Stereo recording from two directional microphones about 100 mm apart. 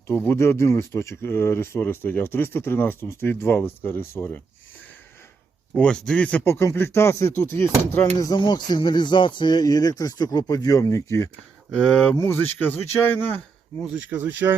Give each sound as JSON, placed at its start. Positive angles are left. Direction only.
{"t": 0.1, "sound": "speech", "side_deg": 20}
{"t": 5.7, "sound": "speech", "side_deg": 10}
{"t": 6.5, "sound": "speech", "side_deg": 25}
{"t": 8.4, "sound": "speech", "side_deg": 45}
{"t": 11.7, "sound": "speech", "side_deg": 10}
{"t": 12.1, "sound": "speech", "side_deg": 25}
{"t": 13.9, "sound": "speech", "side_deg": -15}